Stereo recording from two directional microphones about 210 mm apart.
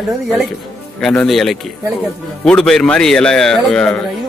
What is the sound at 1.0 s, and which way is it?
Speech, centre (ahead or behind).